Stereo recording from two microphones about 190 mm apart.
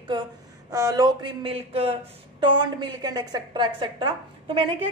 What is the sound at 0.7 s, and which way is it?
A woman's voice, 15° right (ahead or behind).